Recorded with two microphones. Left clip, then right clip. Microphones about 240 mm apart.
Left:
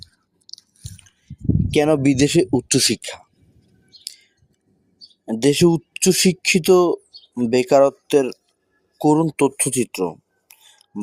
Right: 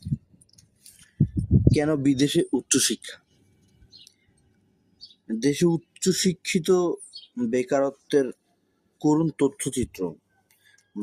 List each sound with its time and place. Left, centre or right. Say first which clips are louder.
1.7 s speech: left 9 dB; left
5.2 s speech: left 7 dB; left